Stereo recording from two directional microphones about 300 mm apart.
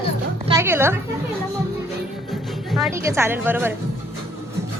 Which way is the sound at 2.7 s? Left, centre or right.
Centre.